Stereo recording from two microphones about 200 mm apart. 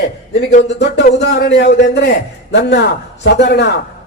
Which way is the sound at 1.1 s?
55° left (ahead or behind).